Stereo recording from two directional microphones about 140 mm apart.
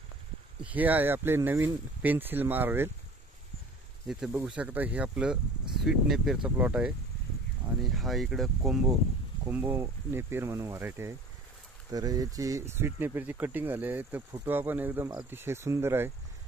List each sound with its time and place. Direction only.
0.6 s speech: 10° right (ahead or behind)
4.5 s speech: 10° right (ahead or behind)
9.5 s speech: 15° right (ahead or behind)
11.9 s speech: 25° right (ahead or behind)